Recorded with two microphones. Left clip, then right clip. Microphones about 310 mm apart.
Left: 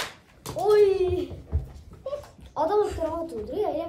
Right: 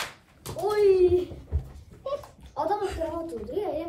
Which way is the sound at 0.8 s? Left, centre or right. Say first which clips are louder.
Right 3 dB; centre.